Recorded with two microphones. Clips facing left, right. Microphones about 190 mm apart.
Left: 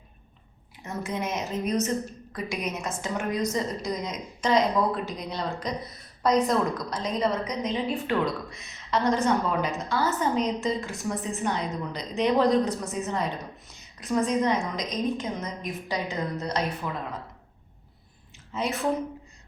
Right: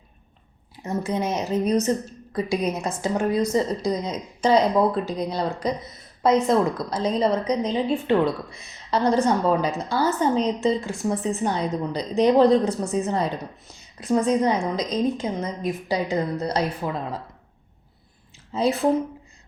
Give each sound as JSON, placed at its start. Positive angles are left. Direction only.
{"t": 0.9, "sound": "a woman's voice", "side_deg": -30}
{"t": 18.5, "sound": "a woman's voice", "side_deg": -30}